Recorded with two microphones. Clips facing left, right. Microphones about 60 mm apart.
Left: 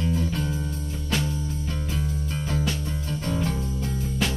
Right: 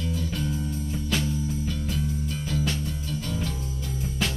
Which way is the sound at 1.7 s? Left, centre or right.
Left.